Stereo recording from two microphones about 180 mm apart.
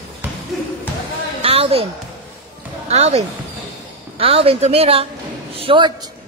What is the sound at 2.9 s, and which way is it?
A woman's voice, 35° right (ahead or behind).